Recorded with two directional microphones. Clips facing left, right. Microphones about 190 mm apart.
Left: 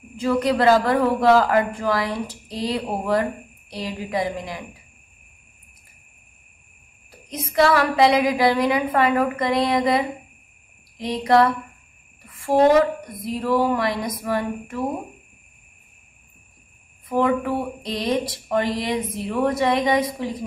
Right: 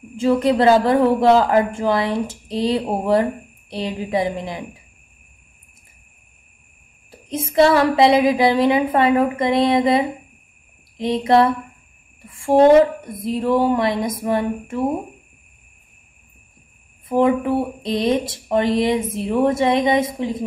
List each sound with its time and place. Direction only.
0.2 s speech: 25° right (ahead or behind)
7.1 s speech: 25° right (ahead or behind)
17.1 s speech: 25° right (ahead or behind)